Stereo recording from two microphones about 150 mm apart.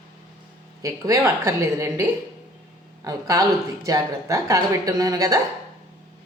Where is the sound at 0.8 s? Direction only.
20° right (ahead or behind).